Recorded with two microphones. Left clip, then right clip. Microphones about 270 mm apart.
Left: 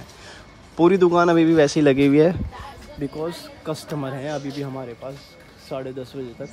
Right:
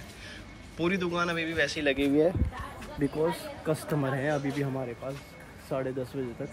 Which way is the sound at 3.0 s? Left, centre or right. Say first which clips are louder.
Even; centre.